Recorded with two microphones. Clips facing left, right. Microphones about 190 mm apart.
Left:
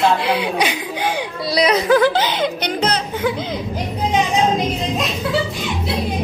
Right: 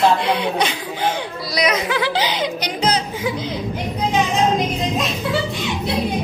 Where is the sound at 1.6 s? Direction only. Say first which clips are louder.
Left 6 dB; 35° left (ahead or behind); by 3.3 s 55° left (ahead or behind).